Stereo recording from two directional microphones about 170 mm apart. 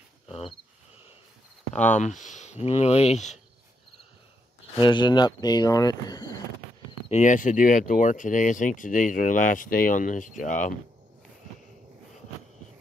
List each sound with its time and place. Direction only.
0.3 s a sound: 35° left (ahead or behind)
1.8 s speech: 45° left (ahead or behind)
4.7 s speech: 25° left (ahead or behind)
7.1 s speech: 45° left (ahead or behind)